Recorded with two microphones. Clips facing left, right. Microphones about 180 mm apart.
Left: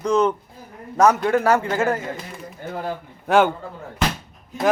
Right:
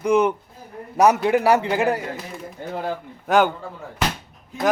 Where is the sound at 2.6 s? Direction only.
25° right (ahead or behind).